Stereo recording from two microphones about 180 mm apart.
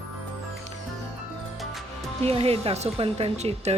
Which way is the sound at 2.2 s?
35° right (ahead or behind).